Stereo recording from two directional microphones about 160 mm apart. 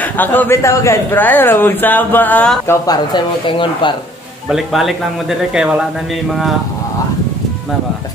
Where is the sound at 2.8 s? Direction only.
25° left (ahead or behind).